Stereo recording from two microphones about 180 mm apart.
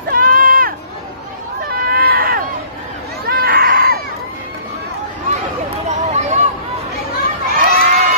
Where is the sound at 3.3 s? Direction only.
55° right (ahead or behind).